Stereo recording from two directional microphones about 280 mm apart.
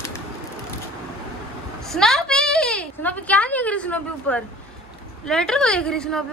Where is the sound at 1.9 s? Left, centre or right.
Centre.